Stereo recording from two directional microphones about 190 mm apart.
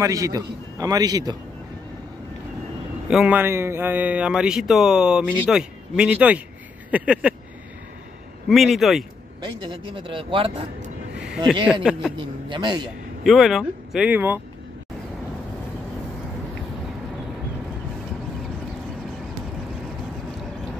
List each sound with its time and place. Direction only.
0.0 s a man's voice: 20° right (ahead or behind)
3.1 s speech: 5° right (ahead or behind)
6.9 s a sound: 5° right (ahead or behind)
8.5 s speech: centre (ahead or behind)
9.7 s a man's voice: 25° right (ahead or behind)
11.1 s a sound: 5° right (ahead or behind)
11.6 s speech: 5° right (ahead or behind)
12.2 s a man's voice: 25° right (ahead or behind)
13.2 s speech: centre (ahead or behind)